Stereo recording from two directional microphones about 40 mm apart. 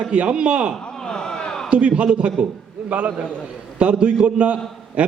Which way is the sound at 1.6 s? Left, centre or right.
Right.